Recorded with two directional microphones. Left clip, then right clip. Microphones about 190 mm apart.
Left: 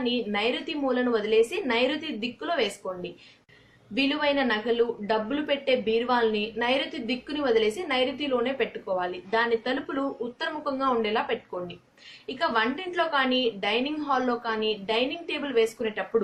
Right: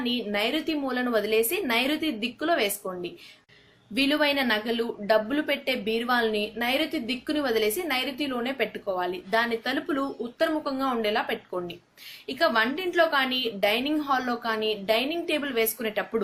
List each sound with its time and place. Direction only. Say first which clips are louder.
0.0 s a woman's voice: left 1 dB; 45° right (ahead or behind)